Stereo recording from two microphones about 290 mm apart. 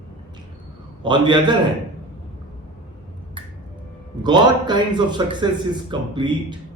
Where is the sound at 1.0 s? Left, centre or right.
Centre.